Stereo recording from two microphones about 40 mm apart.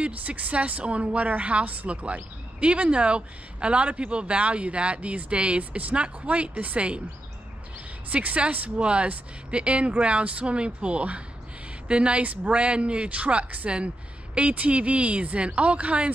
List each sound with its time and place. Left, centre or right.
0.0 s a woman's voice: right
2.6 s a woman's voice: right
8.1 s a woman's voice: right
8.7 s a woman's voice: right